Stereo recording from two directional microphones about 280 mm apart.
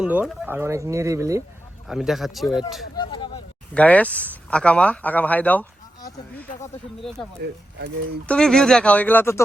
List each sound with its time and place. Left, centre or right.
0.0 s speech: centre
2.9 s a sound: centre
3.8 s speech: centre
8.3 s speech: centre